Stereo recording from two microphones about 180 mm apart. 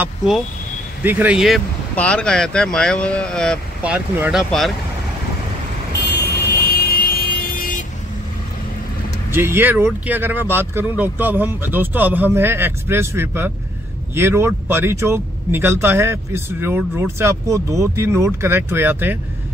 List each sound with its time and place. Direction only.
0.0 s speech: centre (ahead or behind)
3.8 s speech: 10° right (ahead or behind)
5.9 s vehicle: 65° left (ahead or behind); by 7.8 s 50° left (ahead or behind)
9.3 s speech: 15° right (ahead or behind)